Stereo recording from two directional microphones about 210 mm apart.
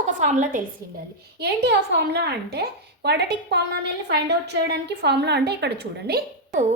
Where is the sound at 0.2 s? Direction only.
35° right (ahead or behind).